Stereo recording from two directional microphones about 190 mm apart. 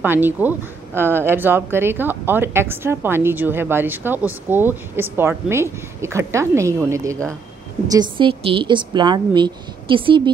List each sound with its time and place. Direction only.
0.0 s a woman's voice: 10° right (ahead or behind); by 10.3 s 25° right (ahead or behind)